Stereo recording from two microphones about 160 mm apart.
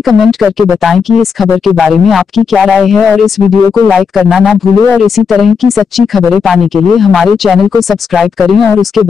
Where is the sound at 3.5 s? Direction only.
25° left (ahead or behind).